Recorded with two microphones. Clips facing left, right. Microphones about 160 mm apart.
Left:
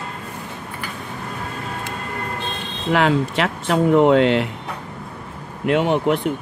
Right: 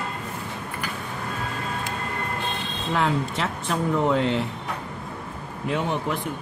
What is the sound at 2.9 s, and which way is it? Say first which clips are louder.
Speech: left 6 dB; 80° left.